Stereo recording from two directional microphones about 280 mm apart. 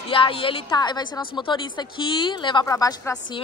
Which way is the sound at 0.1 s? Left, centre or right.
Centre.